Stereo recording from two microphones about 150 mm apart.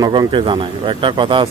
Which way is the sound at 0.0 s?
30° right (ahead or behind).